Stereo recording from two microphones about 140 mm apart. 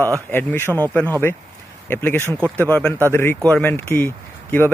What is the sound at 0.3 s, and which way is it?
Speech, 15° left (ahead or behind).